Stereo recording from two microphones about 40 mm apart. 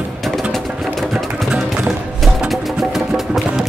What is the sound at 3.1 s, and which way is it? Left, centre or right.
Music, centre.